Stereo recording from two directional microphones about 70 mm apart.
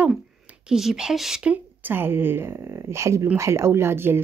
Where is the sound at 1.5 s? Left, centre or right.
Right.